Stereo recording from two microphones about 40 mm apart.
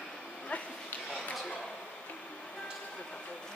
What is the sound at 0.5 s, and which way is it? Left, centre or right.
Dog, left.